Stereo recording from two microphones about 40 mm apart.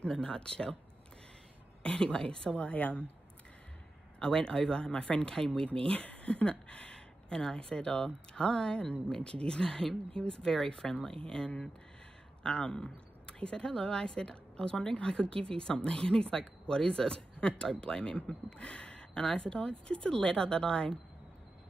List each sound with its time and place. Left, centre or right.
0.1 s speech: left
1.8 s speech: left
2.5 s a woman's voice: left
4.2 s speech: left
5.9 s speech: left